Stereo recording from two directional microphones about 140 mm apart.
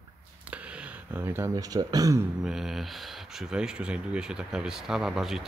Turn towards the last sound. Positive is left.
turn(degrees=0)  # may be behind; listen again after turning